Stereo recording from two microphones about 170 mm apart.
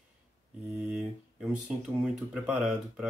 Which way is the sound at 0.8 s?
5° right (ahead or behind).